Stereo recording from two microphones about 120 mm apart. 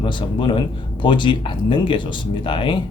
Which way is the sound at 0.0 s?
40° left (ahead or behind).